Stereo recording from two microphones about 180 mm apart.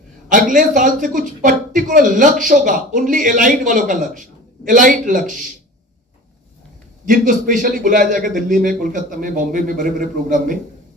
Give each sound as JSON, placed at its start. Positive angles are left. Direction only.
{"t": 0.3, "sound": "a man's voice", "side_deg": -45}
{"t": 7.1, "sound": "a man's voice", "side_deg": -45}